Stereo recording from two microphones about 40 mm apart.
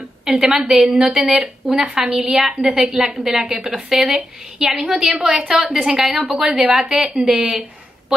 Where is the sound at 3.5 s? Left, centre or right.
Right.